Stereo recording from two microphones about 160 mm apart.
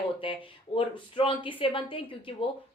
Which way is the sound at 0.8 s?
35° left (ahead or behind).